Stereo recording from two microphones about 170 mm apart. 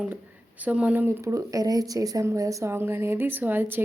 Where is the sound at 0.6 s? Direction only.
10° right (ahead or behind).